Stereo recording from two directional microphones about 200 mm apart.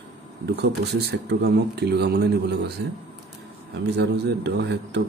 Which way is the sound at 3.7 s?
55° right (ahead or behind).